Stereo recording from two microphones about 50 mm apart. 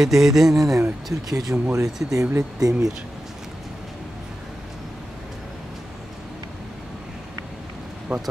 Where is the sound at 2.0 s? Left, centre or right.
Right.